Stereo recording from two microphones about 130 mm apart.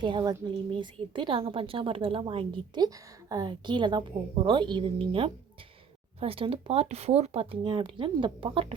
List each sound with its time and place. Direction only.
0.0 s a woman's voice: 35° right (ahead or behind)